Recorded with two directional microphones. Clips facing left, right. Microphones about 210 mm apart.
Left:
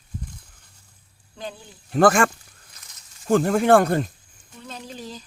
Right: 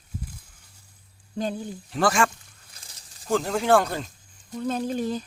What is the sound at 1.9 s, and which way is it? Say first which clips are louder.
Speech: left 6 dB; 50° left (ahead or behind).